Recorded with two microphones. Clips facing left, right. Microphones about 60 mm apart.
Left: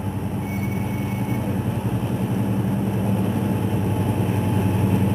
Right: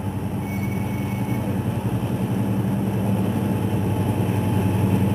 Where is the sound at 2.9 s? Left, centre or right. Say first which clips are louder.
Even; centre.